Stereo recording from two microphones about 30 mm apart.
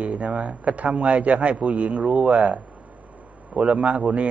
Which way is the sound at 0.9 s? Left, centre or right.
Centre.